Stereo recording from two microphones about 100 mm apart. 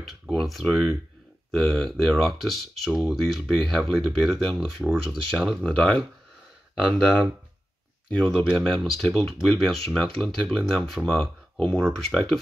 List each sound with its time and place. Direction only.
0.0 s speech: centre (ahead or behind)
5.7 s speech: 10° left (ahead or behind)
8.1 s speech: 10° left (ahead or behind)